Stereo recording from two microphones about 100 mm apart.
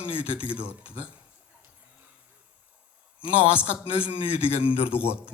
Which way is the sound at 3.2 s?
65° left (ahead or behind).